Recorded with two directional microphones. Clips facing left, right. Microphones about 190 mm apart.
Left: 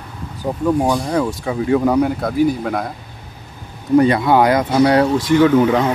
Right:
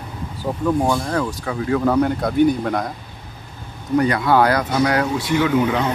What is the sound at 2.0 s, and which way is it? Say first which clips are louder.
Speech: left 1 dB; 5° left (ahead or behind).